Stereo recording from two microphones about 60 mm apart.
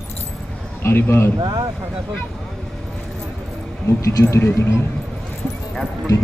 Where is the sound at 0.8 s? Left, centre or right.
Left.